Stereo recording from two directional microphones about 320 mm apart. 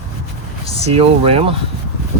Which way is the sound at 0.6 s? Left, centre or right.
Centre.